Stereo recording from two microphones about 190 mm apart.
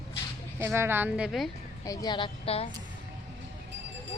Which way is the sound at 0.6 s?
15° right (ahead or behind).